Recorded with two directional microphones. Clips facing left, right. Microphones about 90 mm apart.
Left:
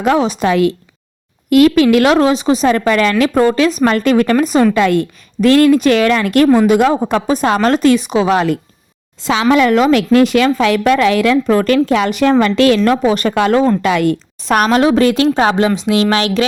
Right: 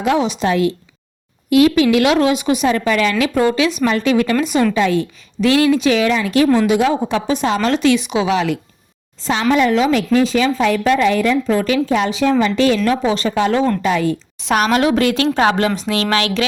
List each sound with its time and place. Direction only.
0.0 s speech: 45° left (ahead or behind)
0.4 s speech: 65° left (ahead or behind)
1.5 s speech: 55° left (ahead or behind); by 2.6 s 30° left (ahead or behind)
2.6 s speech: 50° left (ahead or behind)
4.7 s a woman's voice: 55° left (ahead or behind)
9.2 s speech: 90° left
9.9 s speech: 75° left (ahead or behind)
14.4 s speech: 50° left (ahead or behind)
14.7 s speech: 35° left (ahead or behind)